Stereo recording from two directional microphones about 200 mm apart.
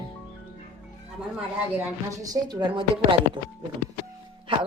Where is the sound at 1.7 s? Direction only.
15° right (ahead or behind).